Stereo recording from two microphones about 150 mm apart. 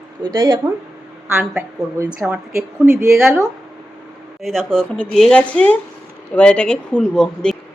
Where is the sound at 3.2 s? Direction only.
5° right (ahead or behind).